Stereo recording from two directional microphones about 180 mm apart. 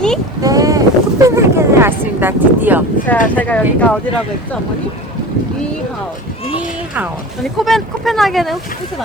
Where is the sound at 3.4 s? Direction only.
10° left (ahead or behind).